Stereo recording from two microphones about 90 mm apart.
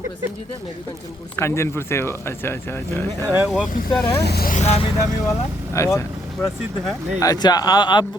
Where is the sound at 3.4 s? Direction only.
Centre (ahead or behind).